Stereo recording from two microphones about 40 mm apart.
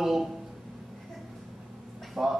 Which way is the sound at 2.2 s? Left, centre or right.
Right.